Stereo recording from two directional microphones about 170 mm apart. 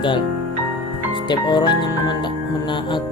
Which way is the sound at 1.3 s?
25° left (ahead or behind).